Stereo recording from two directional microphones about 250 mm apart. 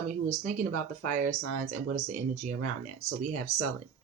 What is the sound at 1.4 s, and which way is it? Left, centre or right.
Speech, right.